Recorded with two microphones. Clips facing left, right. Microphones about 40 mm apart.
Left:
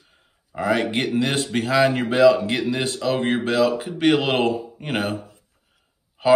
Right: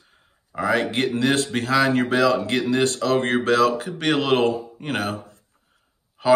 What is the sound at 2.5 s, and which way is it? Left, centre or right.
Speech, centre.